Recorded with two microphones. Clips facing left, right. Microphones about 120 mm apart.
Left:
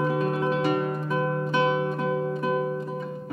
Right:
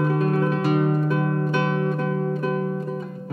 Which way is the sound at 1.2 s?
20° left (ahead or behind).